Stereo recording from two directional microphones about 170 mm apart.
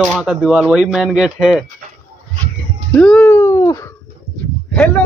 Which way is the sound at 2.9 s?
5° left (ahead or behind).